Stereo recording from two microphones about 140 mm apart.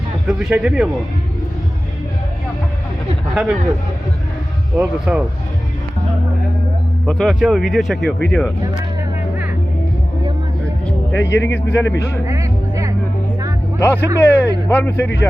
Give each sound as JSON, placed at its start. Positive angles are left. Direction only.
{"t": 0.3, "sound": "speech", "side_deg": -5}
{"t": 4.8, "sound": "speech", "side_deg": -10}
{"t": 7.0, "sound": "speech", "side_deg": 0}
{"t": 11.1, "sound": "a man's voice", "side_deg": 15}
{"t": 13.7, "sound": "speech", "side_deg": 15}